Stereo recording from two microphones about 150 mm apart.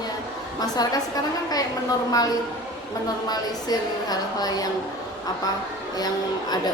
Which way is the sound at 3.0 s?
25° left (ahead or behind).